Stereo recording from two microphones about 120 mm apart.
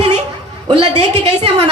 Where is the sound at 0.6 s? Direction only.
50° right (ahead or behind).